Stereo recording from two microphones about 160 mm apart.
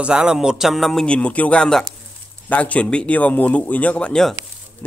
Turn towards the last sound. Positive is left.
turn(degrees=10)  # may be behind; listen again after turning